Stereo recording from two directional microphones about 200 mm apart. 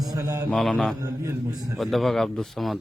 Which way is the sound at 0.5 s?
Centre (ahead or behind).